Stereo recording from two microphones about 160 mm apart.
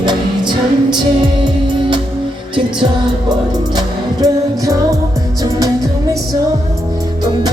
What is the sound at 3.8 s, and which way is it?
Music, 20° right (ahead or behind).